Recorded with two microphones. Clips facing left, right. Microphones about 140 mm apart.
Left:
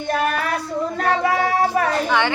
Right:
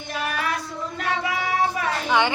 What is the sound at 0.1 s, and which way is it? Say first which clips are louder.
Child singing: left 6 dB; 50° left (ahead or behind).